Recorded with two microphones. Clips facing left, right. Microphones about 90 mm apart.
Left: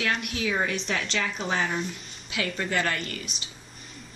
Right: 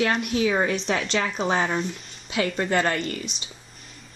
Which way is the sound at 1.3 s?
30° right (ahead or behind).